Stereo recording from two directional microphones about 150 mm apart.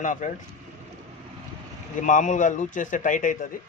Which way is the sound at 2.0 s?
55° left (ahead or behind).